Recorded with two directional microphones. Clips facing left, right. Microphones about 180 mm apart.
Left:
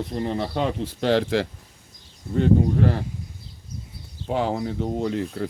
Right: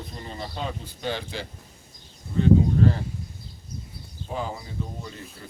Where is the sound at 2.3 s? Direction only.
65° left (ahead or behind).